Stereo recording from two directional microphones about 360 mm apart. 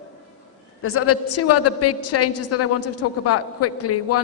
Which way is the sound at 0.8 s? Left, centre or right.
Left.